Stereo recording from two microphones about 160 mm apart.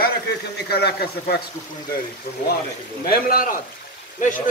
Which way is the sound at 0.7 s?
85° left.